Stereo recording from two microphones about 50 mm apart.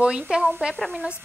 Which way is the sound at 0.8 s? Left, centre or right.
Centre.